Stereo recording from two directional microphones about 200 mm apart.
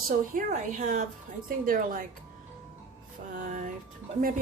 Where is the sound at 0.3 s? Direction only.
40° right (ahead or behind).